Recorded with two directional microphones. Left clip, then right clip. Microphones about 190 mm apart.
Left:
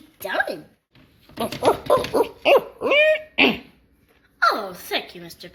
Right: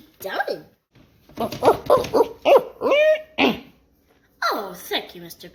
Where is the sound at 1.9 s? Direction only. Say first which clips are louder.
Right 2 dB; 10° right (ahead or behind).